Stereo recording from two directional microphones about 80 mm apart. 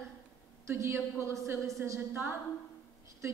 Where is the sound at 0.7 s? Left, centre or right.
Right.